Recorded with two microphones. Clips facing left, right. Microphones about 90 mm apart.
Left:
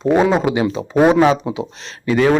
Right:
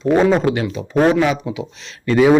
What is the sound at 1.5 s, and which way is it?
Speech, 35° left (ahead or behind).